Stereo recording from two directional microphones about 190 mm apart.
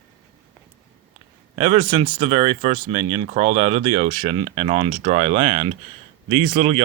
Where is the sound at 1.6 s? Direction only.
30° right (ahead or behind).